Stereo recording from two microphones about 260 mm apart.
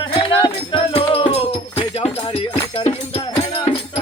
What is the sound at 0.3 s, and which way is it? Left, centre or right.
Music, centre.